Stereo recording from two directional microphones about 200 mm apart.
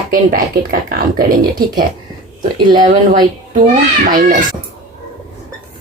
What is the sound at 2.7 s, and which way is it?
Speech, 40° right (ahead or behind).